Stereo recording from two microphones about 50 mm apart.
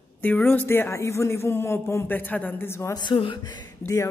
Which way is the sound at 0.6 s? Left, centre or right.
Left.